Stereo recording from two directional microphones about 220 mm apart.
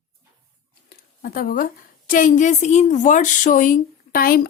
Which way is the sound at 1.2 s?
40° left (ahead or behind).